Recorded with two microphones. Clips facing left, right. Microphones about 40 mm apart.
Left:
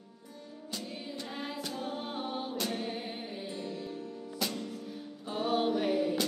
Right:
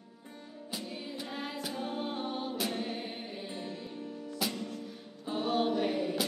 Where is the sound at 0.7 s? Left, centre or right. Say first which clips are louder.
Even; centre.